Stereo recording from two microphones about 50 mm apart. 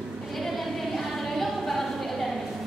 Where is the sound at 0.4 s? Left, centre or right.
Centre.